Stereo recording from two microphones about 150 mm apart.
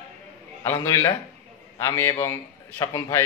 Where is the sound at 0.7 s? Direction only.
20° left (ahead or behind).